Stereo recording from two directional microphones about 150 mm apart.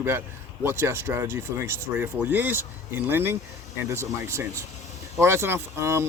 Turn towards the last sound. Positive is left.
turn(degrees=-20)  # may be behind; listen again after turning